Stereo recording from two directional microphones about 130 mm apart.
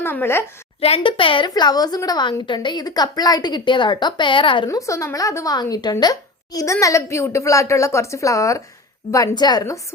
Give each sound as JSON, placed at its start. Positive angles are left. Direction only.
{"t": 0.0, "sound": "a woman's voice", "side_deg": 15}
{"t": 0.8, "sound": "a woman's voice", "side_deg": 50}
{"t": 4.8, "sound": "a woman's voice", "side_deg": 25}